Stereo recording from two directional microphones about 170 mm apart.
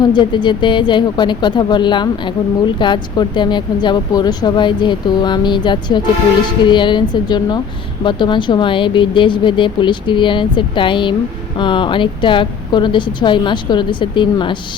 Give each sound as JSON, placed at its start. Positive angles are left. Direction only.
{"t": 0.0, "sound": "speech", "side_deg": 25}